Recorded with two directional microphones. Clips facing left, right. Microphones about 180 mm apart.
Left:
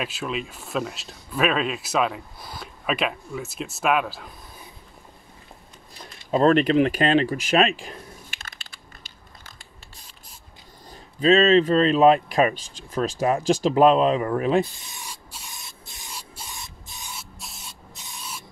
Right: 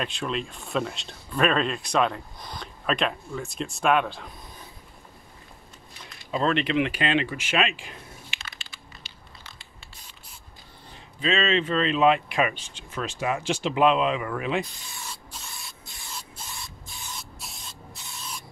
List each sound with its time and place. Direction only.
0.0 s speech: 5° left (ahead or behind)
6.3 s speech: 45° left (ahead or behind)
9.4 s a sound: 45° left (ahead or behind)
10.9 s speech: 40° left (ahead or behind)
14.8 s spray: 20° left (ahead or behind)
17.1 s spray: centre (ahead or behind)
17.6 s spray: 15° left (ahead or behind)